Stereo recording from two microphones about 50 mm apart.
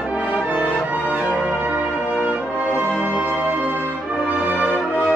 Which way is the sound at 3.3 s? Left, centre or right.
Left.